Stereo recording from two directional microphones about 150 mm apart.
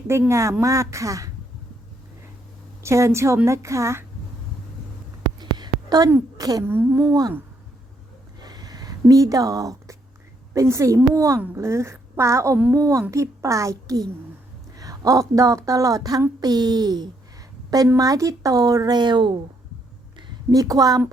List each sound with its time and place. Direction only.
0.1 s a woman's voice: 20° right (ahead or behind)
2.8 s a woman's voice: 20° right (ahead or behind)
5.4 s a sound: 30° right (ahead or behind)
6.3 s a woman's voice: 25° right (ahead or behind)
7.1 s a woman's voice: 25° right (ahead or behind)
8.4 s a sound: 25° right (ahead or behind)
10.5 s a woman's voice: 20° right (ahead or behind)